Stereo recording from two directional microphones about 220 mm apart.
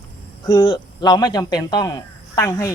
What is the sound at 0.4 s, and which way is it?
Speech, 20° left (ahead or behind).